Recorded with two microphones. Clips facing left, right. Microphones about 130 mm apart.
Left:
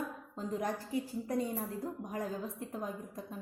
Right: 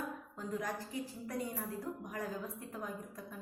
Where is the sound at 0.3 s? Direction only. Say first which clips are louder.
Left 4 dB; 25° left (ahead or behind).